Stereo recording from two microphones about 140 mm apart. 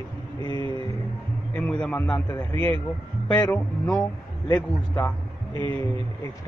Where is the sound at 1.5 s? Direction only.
10° left (ahead or behind).